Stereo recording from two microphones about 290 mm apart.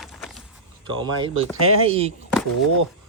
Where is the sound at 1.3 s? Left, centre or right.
Right.